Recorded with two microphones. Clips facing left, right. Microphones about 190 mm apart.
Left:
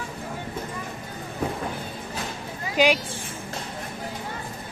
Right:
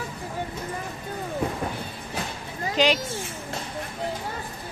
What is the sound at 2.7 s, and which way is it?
Speech, 10° left (ahead or behind).